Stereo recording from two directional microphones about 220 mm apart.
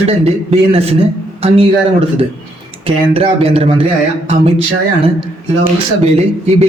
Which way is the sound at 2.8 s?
25° right (ahead or behind).